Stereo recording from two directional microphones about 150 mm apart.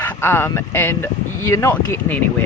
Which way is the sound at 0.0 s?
15° left (ahead or behind).